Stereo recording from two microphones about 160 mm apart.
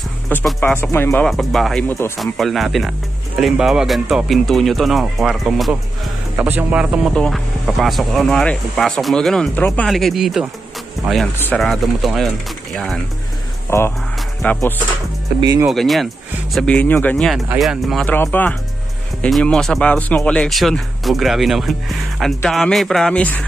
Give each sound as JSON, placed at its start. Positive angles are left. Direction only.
{"t": 0.6, "sound": "speech", "side_deg": 15}
{"t": 1.2, "sound": "speech", "side_deg": 0}
{"t": 1.9, "sound": "speech", "side_deg": 15}
{"t": 2.1, "sound": "speech", "side_deg": 0}
{"t": 11.3, "sound": "speech", "side_deg": 10}
{"t": 13.7, "sound": "speech", "side_deg": 15}
{"t": 15.4, "sound": "speech", "side_deg": -25}
{"t": 15.7, "sound": "speech", "side_deg": 0}
{"t": 17.6, "sound": "speech", "side_deg": 0}
{"t": 18.0, "sound": "speech", "side_deg": 10}